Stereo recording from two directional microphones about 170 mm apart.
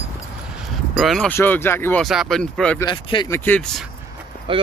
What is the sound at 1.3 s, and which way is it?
Speech, 10° left (ahead or behind).